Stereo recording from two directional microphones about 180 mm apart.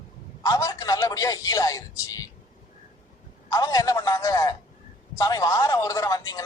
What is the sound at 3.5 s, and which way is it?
A man's voice, 20° left (ahead or behind).